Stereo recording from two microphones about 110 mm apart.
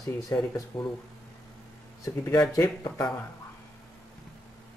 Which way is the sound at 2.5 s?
35° left (ahead or behind).